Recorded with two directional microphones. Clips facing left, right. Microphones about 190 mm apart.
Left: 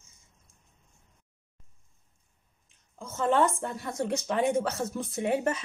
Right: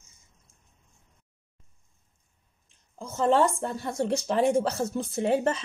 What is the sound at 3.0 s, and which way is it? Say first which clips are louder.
Speech: right 2 dB; 30° right (ahead or behind).